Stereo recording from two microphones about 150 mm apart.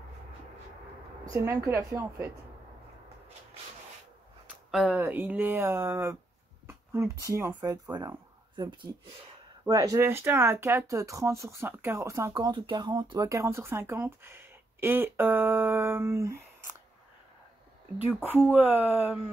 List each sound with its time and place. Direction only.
1.2 s a woman's voice: 20° right (ahead or behind)
4.6 s speech: 5° right (ahead or behind)
6.7 s a sound: 20° right (ahead or behind)
7.2 s speech: 20° right (ahead or behind)
17.9 s speech: 15° right (ahead or behind)